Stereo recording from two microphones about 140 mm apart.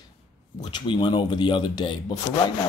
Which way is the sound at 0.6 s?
30° left (ahead or behind).